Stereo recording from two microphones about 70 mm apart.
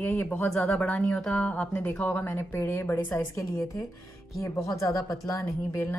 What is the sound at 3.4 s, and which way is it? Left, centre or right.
Speech, left.